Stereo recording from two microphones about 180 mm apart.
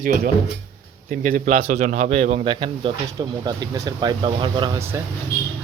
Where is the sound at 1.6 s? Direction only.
40° right (ahead or behind).